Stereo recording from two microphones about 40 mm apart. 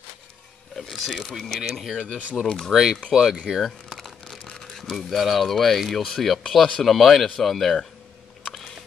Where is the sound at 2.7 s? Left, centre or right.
Centre.